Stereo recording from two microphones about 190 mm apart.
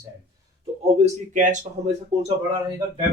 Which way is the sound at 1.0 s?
40° right (ahead or behind).